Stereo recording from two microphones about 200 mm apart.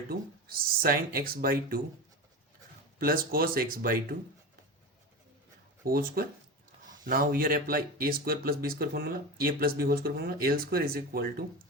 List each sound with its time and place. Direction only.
0.1 s speech: 50° right (ahead or behind)
3.0 s speech: 50° right (ahead or behind)
5.8 s speech: 50° right (ahead or behind)